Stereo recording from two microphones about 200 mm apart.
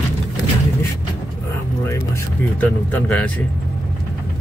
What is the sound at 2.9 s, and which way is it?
Speech, 5° left (ahead or behind).